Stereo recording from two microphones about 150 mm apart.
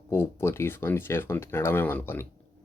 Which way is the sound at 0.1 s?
15° left (ahead or behind).